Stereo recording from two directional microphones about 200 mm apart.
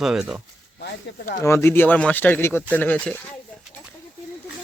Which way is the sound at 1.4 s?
15° left (ahead or behind).